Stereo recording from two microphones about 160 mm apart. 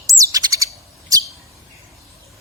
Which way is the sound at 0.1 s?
20° right (ahead or behind).